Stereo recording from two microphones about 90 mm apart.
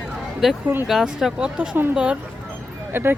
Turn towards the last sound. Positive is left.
turn(degrees=-25)  # may be behind; listen again after turning